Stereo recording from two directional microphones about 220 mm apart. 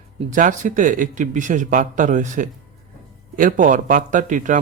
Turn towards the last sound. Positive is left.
turn(degrees=-35)  # may be behind; listen again after turning